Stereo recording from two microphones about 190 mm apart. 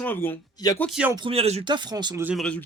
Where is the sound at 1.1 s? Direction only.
30° right (ahead or behind).